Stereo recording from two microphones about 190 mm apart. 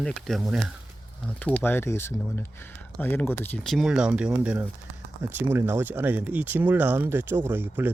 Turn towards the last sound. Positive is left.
turn(degrees=-10)  # may be behind; listen again after turning